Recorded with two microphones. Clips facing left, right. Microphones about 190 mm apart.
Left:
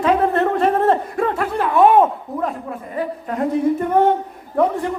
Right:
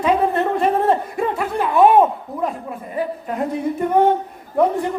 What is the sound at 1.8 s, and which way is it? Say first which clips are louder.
Speech: even; 15° right (ahead or behind).